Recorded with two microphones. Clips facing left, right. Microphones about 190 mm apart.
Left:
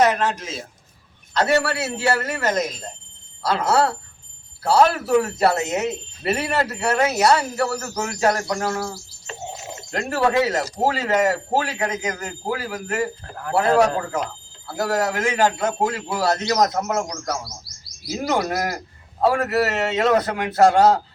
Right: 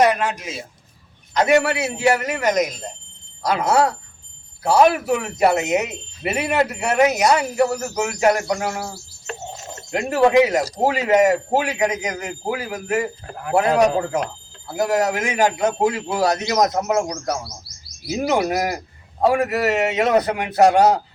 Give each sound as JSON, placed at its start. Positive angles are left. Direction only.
{"t": 0.0, "sound": "speech", "side_deg": -10}
{"t": 9.5, "sound": "a sound", "side_deg": 10}
{"t": 9.9, "sound": "speech", "side_deg": -15}